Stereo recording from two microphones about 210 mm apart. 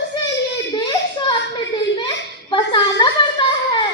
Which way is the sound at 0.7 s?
20° left (ahead or behind).